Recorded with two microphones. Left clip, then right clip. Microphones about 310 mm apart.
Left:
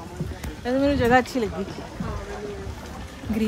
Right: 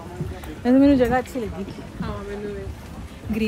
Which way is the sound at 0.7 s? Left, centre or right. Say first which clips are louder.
Right 5 dB; right.